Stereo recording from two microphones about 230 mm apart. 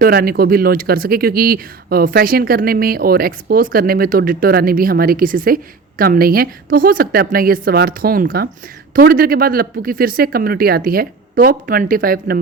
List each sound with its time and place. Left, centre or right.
0.0 s speech: right